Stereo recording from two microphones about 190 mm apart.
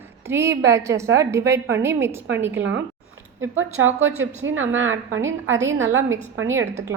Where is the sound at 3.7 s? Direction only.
90° right.